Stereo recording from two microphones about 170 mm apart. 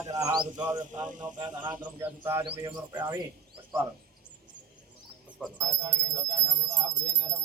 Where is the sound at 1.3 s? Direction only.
25° right (ahead or behind).